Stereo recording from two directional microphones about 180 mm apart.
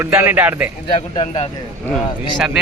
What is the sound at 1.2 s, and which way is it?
Speech, 35° left (ahead or behind).